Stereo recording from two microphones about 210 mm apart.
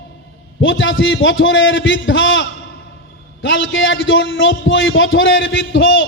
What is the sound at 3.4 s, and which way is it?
A man's voice, 65° left (ahead or behind).